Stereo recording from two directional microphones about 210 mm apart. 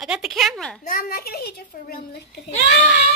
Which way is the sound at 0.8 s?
40° left (ahead or behind).